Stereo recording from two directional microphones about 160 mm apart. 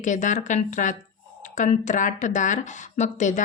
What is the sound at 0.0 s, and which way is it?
Speech, 50° left (ahead or behind).